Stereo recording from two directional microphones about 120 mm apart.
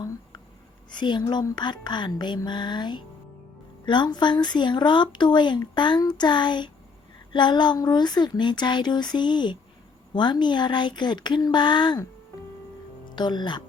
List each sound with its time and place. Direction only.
0.9 s speech: 40° left (ahead or behind)
13.1 s speech: 40° left (ahead or behind)